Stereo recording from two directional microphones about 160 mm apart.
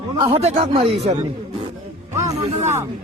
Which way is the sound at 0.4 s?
45° right (ahead or behind).